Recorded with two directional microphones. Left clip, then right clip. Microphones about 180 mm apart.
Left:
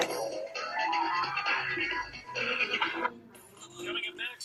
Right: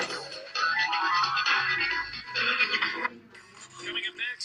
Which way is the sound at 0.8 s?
90° right.